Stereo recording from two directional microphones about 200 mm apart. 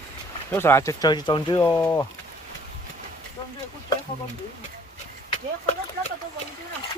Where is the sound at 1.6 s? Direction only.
10° left (ahead or behind).